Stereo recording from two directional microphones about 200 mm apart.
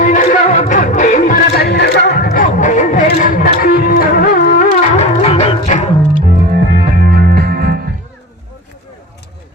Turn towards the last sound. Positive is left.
turn(degrees=-50)  # may be behind; listen again after turning